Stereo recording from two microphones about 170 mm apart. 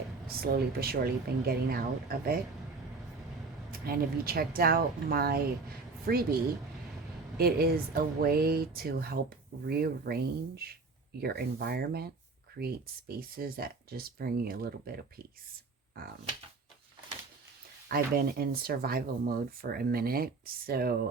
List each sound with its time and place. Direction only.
0.5 s speech: 65° right (ahead or behind)
3.7 s speech: 60° right (ahead or behind)
17.8 s speech: 60° right (ahead or behind)